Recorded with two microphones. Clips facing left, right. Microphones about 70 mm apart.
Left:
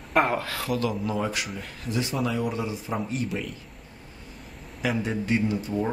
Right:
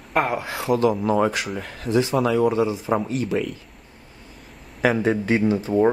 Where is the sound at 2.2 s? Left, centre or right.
Right.